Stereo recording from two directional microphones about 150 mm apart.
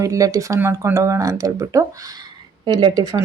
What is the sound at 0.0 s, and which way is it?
Speech, 20° right (ahead or behind).